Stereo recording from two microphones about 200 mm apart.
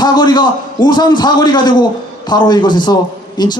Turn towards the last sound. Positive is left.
turn(degrees=20)  # may be behind; listen again after turning